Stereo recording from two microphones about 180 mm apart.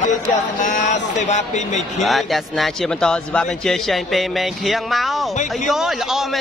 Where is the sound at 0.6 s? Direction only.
45° left (ahead or behind).